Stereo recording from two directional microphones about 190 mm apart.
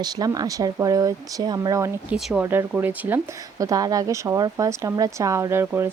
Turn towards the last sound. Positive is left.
turn(degrees=-15)  # may be behind; listen again after turning